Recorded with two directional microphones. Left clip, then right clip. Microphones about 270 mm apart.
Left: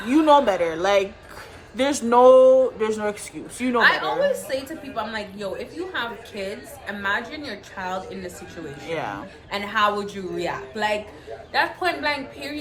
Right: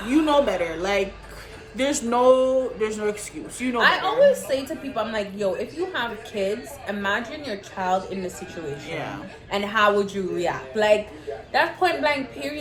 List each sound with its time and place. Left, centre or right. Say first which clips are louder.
0.3 s speech: left 7 dB; centre
3.8 s a woman's voice: right 1 dB; centre
8.9 s speech: left 6 dB; centre
9.5 s a woman's voice: right 2 dB; centre